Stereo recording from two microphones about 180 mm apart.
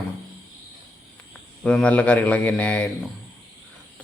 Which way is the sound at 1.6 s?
5° left (ahead or behind).